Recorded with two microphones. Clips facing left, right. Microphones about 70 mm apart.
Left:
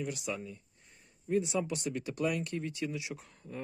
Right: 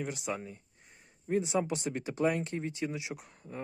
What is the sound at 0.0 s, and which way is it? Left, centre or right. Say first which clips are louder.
Speech: right 1 dB; right.